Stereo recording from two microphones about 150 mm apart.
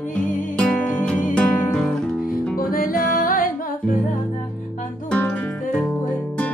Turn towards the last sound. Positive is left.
turn(degrees=10)  # may be behind; listen again after turning